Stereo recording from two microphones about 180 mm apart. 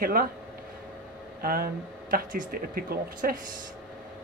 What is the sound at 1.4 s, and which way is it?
Speech, 55° right (ahead or behind).